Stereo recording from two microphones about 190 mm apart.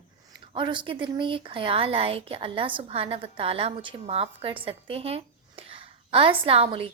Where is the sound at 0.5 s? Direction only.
25° right (ahead or behind).